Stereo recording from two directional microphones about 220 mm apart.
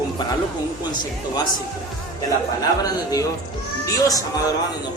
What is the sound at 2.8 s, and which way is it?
A man's voice, 15° left (ahead or behind).